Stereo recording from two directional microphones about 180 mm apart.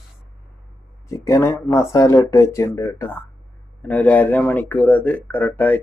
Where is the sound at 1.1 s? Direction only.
15° left (ahead or behind).